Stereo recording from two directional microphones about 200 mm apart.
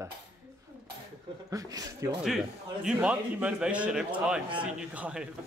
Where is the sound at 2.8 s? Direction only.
5° right (ahead or behind).